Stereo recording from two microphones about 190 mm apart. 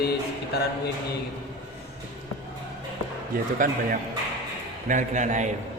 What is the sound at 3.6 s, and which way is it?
Speech, 45° right (ahead or behind).